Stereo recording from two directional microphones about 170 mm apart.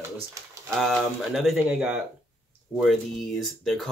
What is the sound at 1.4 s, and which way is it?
Speech, centre (ahead or behind).